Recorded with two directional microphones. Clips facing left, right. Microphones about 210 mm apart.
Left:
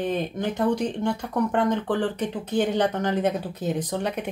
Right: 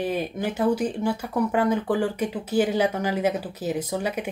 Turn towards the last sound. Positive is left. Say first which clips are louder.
# even
turn(degrees=-5)  # may be behind; listen again after turning